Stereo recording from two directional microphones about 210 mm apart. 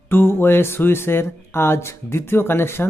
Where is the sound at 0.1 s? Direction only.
10° left (ahead or behind).